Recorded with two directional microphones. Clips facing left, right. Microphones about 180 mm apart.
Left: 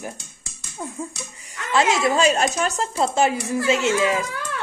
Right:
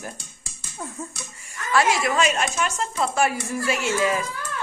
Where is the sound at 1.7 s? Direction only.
20° left (ahead or behind).